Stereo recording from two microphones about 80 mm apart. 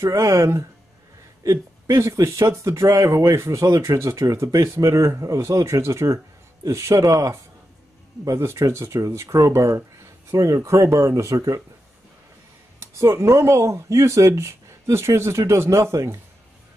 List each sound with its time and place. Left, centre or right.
0.0 s speech: right
12.8 s speech: right